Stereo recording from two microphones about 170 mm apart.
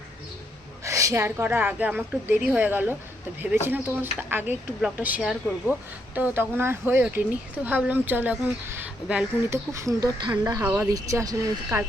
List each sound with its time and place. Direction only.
0.9 s speech: 20° right (ahead or behind)
9.7 s speech: 20° right (ahead or behind)